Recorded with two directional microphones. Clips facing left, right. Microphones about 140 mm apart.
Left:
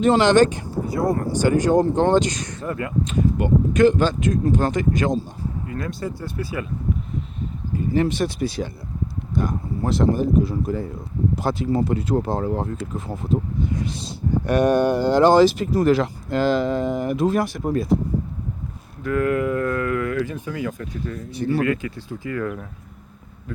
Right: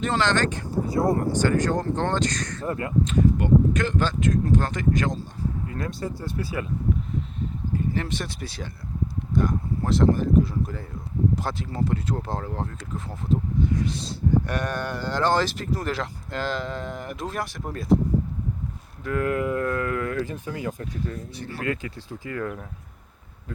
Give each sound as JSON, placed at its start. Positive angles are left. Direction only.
{"t": 0.0, "sound": "speech", "side_deg": 15}
{"t": 2.6, "sound": "speech", "side_deg": -30}
{"t": 3.0, "sound": "speech", "side_deg": 10}
{"t": 5.6, "sound": "speech", "side_deg": -30}
{"t": 7.9, "sound": "speech", "side_deg": 10}
{"t": 19.0, "sound": "speech", "side_deg": -25}
{"t": 21.3, "sound": "speech", "side_deg": 15}
{"t": 21.7, "sound": "speech", "side_deg": -30}